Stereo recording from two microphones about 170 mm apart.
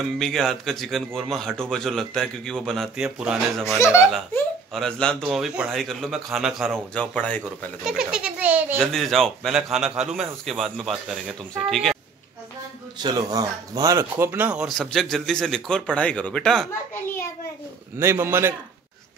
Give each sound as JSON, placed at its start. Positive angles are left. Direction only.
{"t": 0.2, "sound": "speech", "side_deg": 0}
{"t": 3.6, "sound": "speech", "side_deg": 15}
{"t": 4.7, "sound": "speech", "side_deg": 5}
{"t": 7.8, "sound": "a child's voice", "side_deg": -5}
{"t": 8.7, "sound": "speech", "side_deg": 0}
{"t": 13.0, "sound": "speech", "side_deg": -20}
{"t": 17.9, "sound": "a child's voice", "side_deg": -15}